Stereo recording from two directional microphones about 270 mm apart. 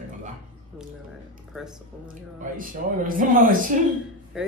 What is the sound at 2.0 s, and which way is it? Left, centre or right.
Speech, right.